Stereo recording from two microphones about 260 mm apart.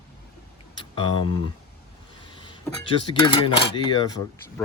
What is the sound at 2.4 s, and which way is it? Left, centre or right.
Speech, centre.